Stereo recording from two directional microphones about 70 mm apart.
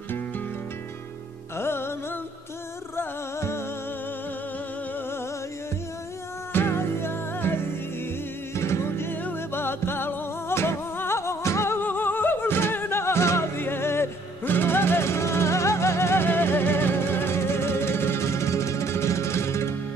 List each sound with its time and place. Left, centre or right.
1.6 s music: left
6.5 s music: left